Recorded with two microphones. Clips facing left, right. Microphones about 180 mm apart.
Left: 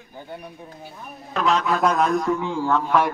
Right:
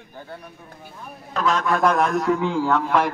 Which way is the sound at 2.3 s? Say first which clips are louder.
Right 2 dB; 90° right.